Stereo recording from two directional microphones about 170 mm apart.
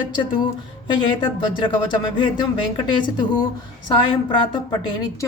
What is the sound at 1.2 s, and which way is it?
Speech, 25° left (ahead or behind).